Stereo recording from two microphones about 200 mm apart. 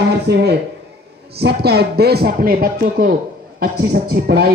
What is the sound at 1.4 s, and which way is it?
Speech, 55° right (ahead or behind).